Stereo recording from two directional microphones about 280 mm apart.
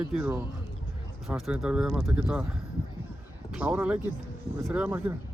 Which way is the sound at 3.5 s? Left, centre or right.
Centre.